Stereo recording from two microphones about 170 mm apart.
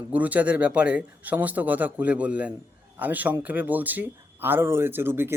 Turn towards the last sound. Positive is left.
turn(degrees=-15)  # may be behind; listen again after turning